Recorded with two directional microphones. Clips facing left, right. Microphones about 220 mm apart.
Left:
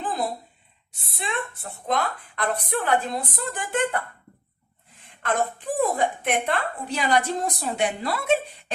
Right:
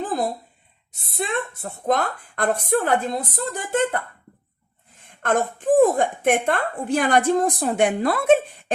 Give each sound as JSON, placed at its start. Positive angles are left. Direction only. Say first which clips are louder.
{"t": 1.1, "sound": "a woman's voice", "louder": "right 5 dB", "side_deg": -40}
{"t": 4.9, "sound": "a woman's voice", "louder": "right 4 dB", "side_deg": -45}